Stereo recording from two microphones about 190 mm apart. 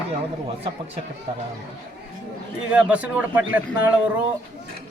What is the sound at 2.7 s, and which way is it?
A man's voice, 5° right (ahead or behind).